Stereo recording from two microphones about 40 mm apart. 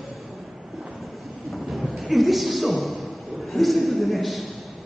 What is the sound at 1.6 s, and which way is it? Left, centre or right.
Music, centre.